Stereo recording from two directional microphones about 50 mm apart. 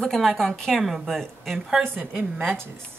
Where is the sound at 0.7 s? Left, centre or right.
Centre.